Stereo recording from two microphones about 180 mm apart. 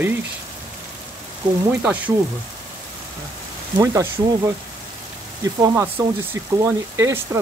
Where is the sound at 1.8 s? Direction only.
10° right (ahead or behind).